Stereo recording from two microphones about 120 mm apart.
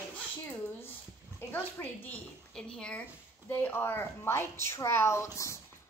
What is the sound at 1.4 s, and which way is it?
A woman's voice, 20° left (ahead or behind).